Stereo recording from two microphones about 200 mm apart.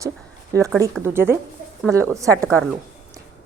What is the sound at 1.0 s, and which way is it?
A woman's voice, 10° right (ahead or behind).